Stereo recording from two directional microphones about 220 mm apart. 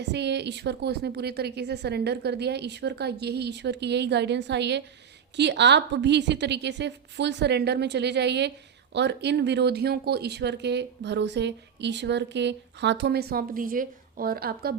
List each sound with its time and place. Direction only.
0.0 s a woman's voice: 50° right (ahead or behind)